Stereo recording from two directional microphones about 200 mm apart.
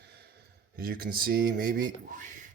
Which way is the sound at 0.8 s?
45° right (ahead or behind).